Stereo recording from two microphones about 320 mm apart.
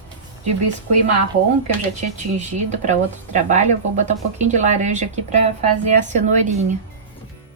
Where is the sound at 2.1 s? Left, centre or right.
Right.